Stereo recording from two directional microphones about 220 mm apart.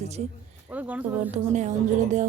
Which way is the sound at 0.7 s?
5° right (ahead or behind).